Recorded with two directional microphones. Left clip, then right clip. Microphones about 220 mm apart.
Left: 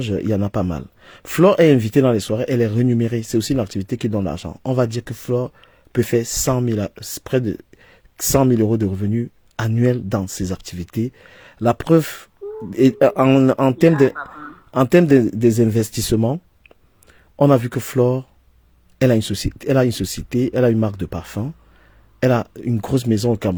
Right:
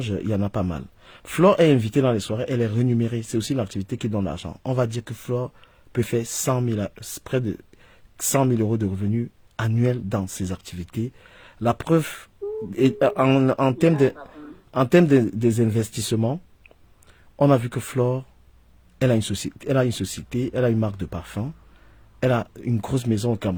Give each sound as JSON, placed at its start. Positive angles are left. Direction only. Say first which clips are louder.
{"t": 0.0, "sound": "speech", "louder": "left 5 dB", "side_deg": 25}